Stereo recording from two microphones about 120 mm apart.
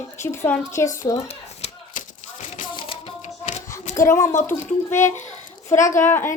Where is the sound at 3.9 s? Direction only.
25° left (ahead or behind).